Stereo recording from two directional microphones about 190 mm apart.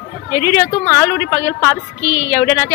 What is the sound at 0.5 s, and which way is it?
Speech, 10° left (ahead or behind).